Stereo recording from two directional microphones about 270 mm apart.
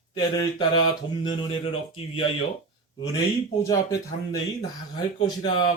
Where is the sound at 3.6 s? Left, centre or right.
Centre.